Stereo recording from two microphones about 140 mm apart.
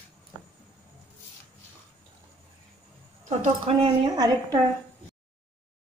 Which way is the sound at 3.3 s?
45° right (ahead or behind).